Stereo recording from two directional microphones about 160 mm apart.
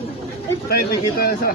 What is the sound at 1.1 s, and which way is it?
Speech, 70° left (ahead or behind).